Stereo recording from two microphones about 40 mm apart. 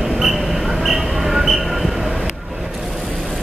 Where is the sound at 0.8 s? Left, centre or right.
Centre.